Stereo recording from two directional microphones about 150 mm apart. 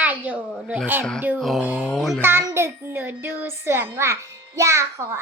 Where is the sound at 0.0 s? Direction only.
10° right (ahead or behind).